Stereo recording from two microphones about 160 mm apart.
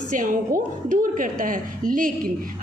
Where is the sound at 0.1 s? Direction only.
55° right (ahead or behind).